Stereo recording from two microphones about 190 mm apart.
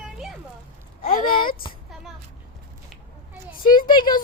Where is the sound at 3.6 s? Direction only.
50° left (ahead or behind).